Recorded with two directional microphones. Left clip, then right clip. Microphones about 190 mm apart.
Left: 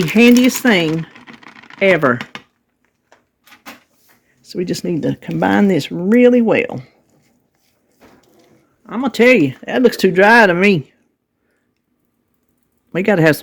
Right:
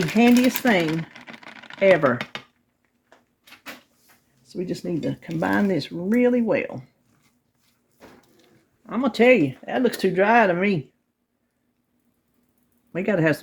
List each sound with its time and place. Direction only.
0.1 s speech: 50° left (ahead or behind)
0.9 s typing: 5° left (ahead or behind)
1.8 s speech: 45° left (ahead or behind)
4.4 s speech: 55° left (ahead or behind)
8.9 s speech: 35° left (ahead or behind); by 10.8 s 50° left (ahead or behind)
12.9 s speech: 50° left (ahead or behind)